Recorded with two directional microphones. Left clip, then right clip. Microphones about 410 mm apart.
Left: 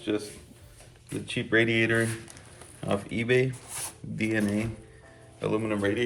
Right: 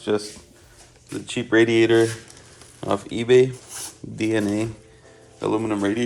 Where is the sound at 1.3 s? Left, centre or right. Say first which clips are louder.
Right 6 dB; centre.